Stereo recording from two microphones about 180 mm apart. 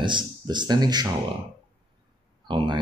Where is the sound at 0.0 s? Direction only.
25° right (ahead or behind).